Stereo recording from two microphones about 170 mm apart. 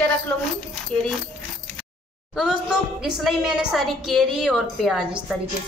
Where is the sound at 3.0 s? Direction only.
5° right (ahead or behind).